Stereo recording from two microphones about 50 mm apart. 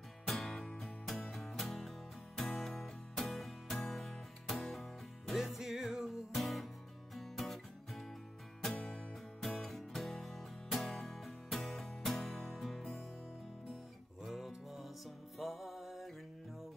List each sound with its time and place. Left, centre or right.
0.3 s music: centre
8.7 s music: centre
9.4 s music: centre
14.2 s music: centre